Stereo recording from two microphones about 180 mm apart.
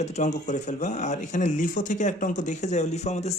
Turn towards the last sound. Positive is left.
turn(degrees=40)  # may be behind; listen again after turning